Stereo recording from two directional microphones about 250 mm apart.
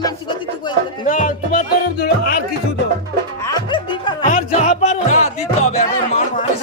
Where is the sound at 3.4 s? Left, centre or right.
Centre; by 6.4 s left.